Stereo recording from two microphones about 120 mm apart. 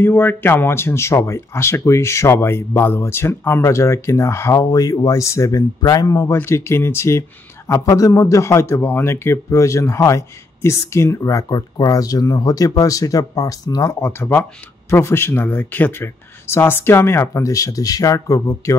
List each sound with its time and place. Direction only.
0.0 s speech: 15° left (ahead or behind)
14.0 s speech: 20° left (ahead or behind)